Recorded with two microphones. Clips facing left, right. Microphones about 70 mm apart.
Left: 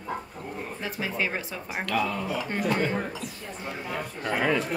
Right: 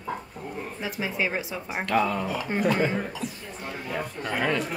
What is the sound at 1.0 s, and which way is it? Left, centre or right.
Speech, centre.